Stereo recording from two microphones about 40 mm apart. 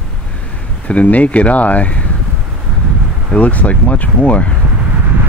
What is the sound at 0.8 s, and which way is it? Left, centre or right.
Speech, left.